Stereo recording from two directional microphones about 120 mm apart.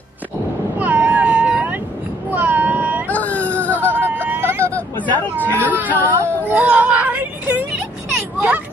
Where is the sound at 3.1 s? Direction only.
15° left (ahead or behind).